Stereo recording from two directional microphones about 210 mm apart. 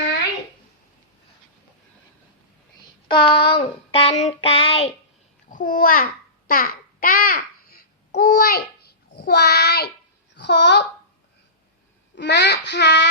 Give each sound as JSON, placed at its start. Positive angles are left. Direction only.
{"t": 3.1, "sound": "child singing", "side_deg": 20}
{"t": 5.5, "sound": "a child's voice", "side_deg": 40}
{"t": 6.5, "sound": "babbling", "side_deg": 45}
{"t": 9.1, "sound": "child singing", "side_deg": 50}
{"t": 12.1, "sound": "child singing", "side_deg": 55}